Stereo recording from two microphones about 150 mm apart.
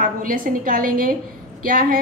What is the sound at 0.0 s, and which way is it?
A woman's voice, 70° right (ahead or behind).